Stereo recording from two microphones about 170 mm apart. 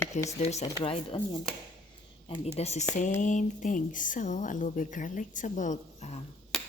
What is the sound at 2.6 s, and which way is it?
A woman's voice, 40° left (ahead or behind).